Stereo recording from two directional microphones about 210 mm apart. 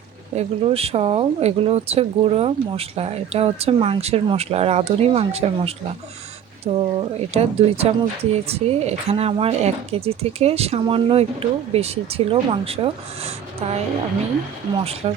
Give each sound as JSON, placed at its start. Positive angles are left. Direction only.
{"t": 0.3, "sound": "speech", "side_deg": -30}
{"t": 15.0, "sound": "speech", "side_deg": -30}